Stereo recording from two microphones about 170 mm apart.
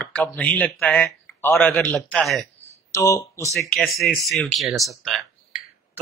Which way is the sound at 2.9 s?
15° left (ahead or behind).